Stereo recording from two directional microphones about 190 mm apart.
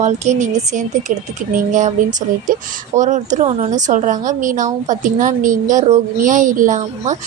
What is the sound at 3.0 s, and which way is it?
A woman's voice, 40° right (ahead or behind).